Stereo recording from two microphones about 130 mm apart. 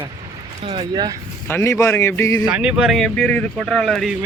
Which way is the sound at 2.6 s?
5° right (ahead or behind).